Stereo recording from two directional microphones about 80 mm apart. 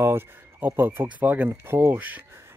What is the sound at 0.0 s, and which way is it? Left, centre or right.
Speech, right.